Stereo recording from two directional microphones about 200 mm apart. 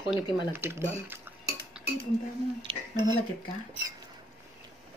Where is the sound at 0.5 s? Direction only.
10° right (ahead or behind).